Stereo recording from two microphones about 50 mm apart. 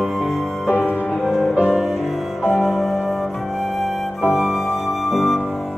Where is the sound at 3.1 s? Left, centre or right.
Centre.